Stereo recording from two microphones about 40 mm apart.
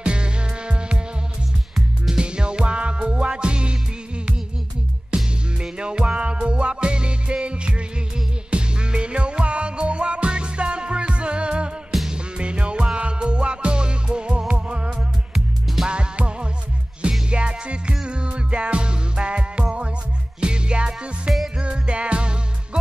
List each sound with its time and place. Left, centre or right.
0.0 s music: right
2.1 s music: right
5.1 s music: right
15.3 s music: centre
15.9 s music: right